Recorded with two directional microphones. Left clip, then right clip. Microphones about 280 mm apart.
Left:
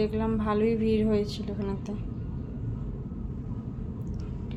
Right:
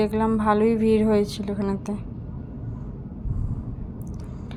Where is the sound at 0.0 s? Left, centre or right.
Centre.